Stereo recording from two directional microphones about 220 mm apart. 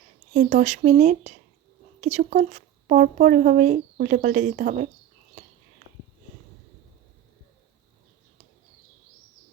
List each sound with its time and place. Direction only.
0.3 s speech: 35° right (ahead or behind)